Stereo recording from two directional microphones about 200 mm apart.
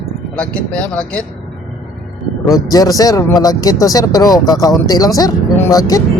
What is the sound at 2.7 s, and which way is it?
Speech, 20° left (ahead or behind).